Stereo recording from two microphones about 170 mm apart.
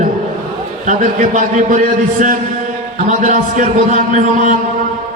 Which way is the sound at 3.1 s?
45° right (ahead or behind).